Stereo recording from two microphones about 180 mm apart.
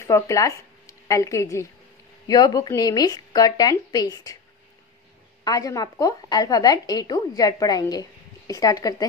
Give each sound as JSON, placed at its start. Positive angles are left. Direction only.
{"t": 0.0, "sound": "a woman's voice", "side_deg": 15}
{"t": 5.4, "sound": "a woman's voice", "side_deg": 20}